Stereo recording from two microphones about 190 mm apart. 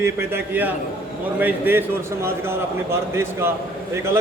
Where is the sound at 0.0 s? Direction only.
10° right (ahead or behind).